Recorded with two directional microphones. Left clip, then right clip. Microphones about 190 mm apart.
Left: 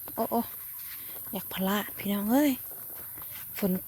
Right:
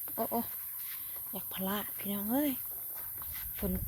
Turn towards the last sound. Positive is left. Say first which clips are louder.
# left 8 dB
turn(degrees=40)  # may be behind; listen again after turning